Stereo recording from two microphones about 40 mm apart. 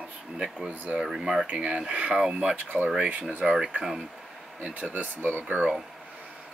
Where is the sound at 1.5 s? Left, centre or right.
Right.